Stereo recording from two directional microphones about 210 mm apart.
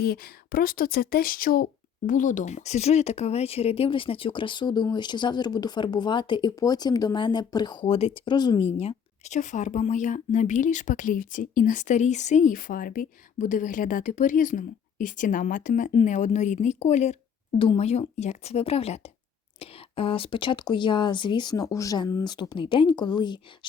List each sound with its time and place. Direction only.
0.0 s speech: 45° left (ahead or behind); by 23.4 s 20° left (ahead or behind)